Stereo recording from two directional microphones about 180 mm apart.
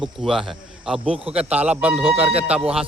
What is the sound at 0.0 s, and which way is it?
A man's voice, centre (ahead or behind).